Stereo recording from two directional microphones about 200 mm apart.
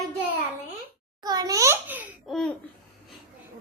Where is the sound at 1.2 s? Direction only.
20° right (ahead or behind).